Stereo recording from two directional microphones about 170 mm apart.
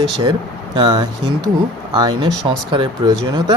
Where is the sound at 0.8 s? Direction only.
25° right (ahead or behind).